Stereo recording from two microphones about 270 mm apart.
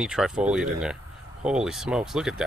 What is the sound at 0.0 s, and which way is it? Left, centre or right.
Speech, centre.